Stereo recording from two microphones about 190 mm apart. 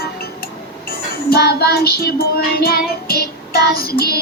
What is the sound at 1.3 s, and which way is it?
Music, 55° left (ahead or behind).